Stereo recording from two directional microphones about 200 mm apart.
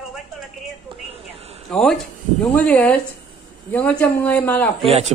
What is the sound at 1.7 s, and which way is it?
A man's voice, 5° left (ahead or behind).